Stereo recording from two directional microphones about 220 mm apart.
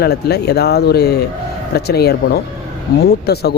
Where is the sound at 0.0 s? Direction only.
45° left (ahead or behind).